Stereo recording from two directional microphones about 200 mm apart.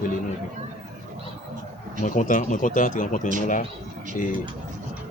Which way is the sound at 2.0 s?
40° left (ahead or behind).